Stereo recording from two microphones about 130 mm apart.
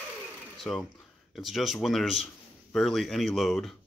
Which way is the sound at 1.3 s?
Centre (ahead or behind).